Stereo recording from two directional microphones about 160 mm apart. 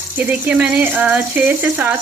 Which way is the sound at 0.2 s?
10° right (ahead or behind).